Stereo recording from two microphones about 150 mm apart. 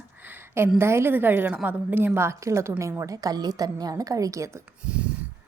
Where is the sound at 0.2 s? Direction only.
15° right (ahead or behind).